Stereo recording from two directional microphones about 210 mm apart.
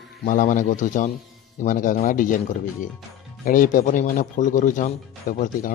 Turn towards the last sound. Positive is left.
turn(degrees=40)  # may be behind; listen again after turning